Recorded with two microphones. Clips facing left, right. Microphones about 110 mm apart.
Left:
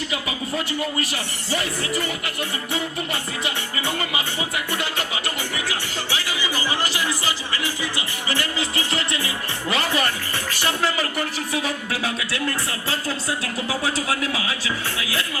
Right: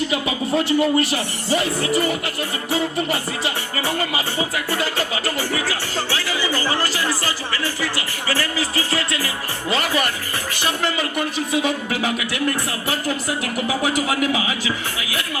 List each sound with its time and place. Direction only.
0.1 s speech: 25° right (ahead or behind)
2.7 s music: 30° right (ahead or behind)
6.1 s music: 15° left (ahead or behind)
6.8 s speech: 20° left (ahead or behind)
11.3 s speech: 20° right (ahead or behind)